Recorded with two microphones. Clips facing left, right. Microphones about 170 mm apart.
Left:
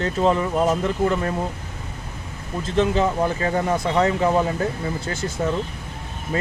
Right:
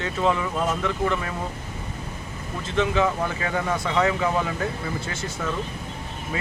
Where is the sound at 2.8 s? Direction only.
35° left (ahead or behind).